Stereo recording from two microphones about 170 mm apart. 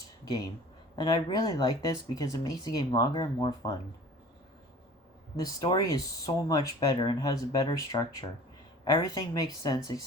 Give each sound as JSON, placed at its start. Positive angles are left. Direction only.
{"t": 0.3, "sound": "speech", "side_deg": 20}
{"t": 5.4, "sound": "speech", "side_deg": 20}